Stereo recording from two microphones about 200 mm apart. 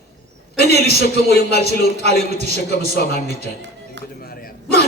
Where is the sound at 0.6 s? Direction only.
50° left (ahead or behind).